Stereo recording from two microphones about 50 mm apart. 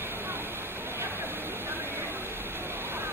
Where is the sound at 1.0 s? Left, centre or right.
Right.